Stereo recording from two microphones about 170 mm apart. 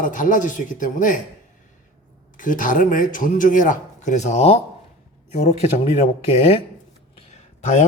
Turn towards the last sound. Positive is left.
turn(degrees=40)  # may be behind; listen again after turning